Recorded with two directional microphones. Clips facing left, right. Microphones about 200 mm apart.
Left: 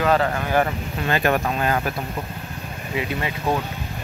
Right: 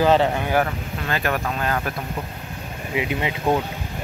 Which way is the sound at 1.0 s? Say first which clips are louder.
Left 4 dB; 20° left (ahead or behind).